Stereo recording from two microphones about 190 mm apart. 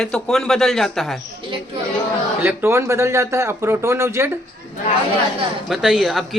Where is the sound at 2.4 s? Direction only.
10° right (ahead or behind).